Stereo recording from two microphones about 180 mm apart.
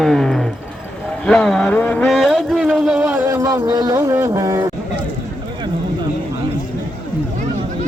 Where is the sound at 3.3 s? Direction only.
15° right (ahead or behind).